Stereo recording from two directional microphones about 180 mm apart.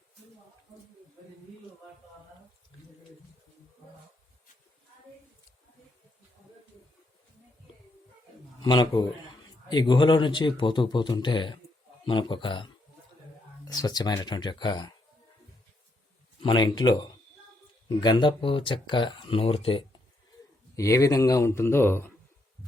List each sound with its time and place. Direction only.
8.6 s speech: 25° left (ahead or behind)
16.4 s speech: 25° left (ahead or behind)
20.7 s speech: 15° left (ahead or behind)